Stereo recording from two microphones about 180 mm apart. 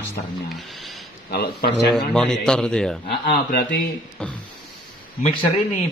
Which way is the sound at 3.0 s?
60° left (ahead or behind).